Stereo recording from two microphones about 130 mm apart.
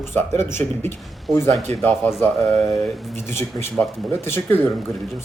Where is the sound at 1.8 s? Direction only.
10° left (ahead or behind).